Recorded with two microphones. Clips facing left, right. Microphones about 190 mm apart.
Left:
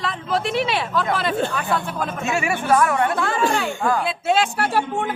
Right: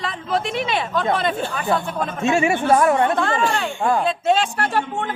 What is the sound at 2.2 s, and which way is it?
Speech, 25° right (ahead or behind).